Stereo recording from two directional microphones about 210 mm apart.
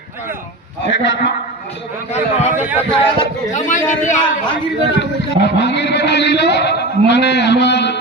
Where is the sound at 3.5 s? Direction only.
35° left (ahead or behind).